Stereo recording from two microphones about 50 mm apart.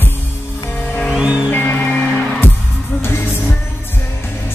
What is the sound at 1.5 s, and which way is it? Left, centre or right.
Music, left.